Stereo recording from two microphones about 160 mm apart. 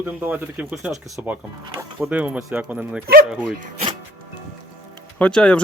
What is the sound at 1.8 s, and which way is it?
Speech, 10° right (ahead or behind).